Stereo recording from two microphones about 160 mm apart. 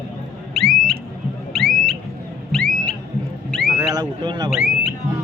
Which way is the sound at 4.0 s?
25° right (ahead or behind).